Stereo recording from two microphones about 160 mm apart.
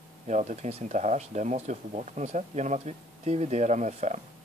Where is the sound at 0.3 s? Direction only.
45° right (ahead or behind).